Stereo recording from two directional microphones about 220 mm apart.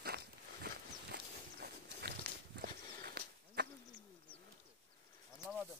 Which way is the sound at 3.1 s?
45° right (ahead or behind).